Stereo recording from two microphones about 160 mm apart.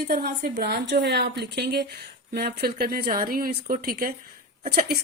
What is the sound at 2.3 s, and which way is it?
Speech, 80° right.